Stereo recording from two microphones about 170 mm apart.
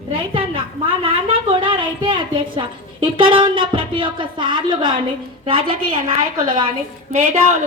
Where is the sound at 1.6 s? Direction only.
30° right (ahead or behind).